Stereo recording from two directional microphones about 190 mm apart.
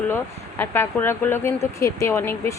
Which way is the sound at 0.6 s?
10° left (ahead or behind).